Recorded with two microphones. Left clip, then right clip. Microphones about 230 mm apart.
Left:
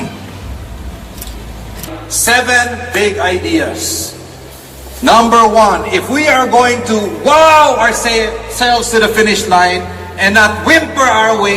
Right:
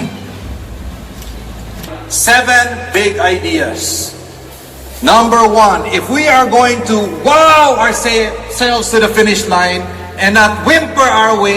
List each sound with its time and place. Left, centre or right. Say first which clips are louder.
2.0 s a man's voice: right 2 dB; centre
4.9 s a man's voice: even; right; by 11.5 s centre